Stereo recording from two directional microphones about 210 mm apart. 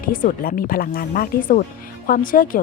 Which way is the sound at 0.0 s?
40° left (ahead or behind).